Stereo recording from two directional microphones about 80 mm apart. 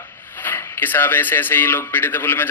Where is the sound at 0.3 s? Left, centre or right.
Left.